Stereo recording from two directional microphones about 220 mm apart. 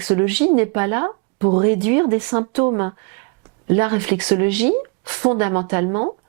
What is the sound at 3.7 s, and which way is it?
Speech, 10° right (ahead or behind).